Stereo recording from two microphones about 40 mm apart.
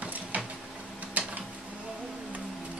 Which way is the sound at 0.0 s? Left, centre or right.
Right.